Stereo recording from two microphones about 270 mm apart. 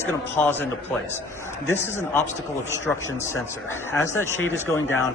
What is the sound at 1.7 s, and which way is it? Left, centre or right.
Speech, centre.